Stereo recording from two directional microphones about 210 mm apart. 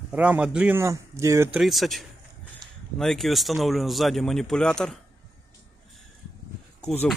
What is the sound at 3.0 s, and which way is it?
Speech, centre (ahead or behind).